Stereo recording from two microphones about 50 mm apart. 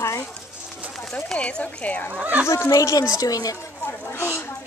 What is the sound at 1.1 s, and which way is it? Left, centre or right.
Speech, left.